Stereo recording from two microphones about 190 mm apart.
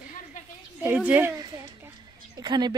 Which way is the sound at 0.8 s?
10° right (ahead or behind).